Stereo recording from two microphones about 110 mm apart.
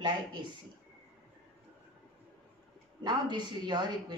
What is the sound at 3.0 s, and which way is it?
A woman's voice, 40° right (ahead or behind).